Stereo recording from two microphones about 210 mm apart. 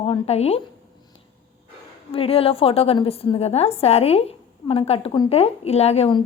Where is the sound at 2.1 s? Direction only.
25° left (ahead or behind).